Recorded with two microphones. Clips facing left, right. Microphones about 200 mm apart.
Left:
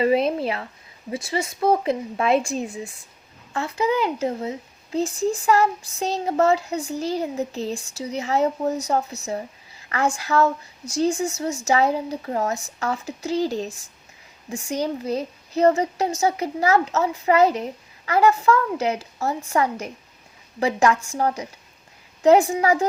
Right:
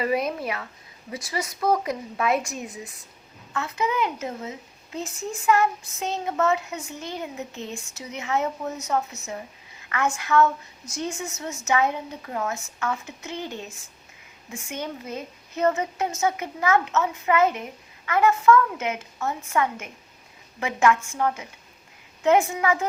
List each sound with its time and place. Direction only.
0.0 s a woman's voice: 25° left (ahead or behind)